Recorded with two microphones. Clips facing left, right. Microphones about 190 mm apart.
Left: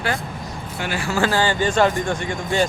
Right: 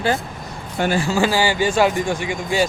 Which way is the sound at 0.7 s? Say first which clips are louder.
Right 8 dB; 40° right (ahead or behind).